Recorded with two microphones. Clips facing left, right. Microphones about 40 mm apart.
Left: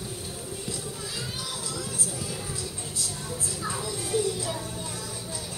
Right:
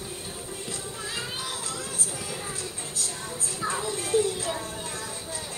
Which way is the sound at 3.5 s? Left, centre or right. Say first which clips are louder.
Right 5 dB; right.